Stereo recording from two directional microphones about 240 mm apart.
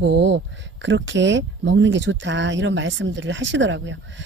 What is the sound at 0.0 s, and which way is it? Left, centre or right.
Speech, right.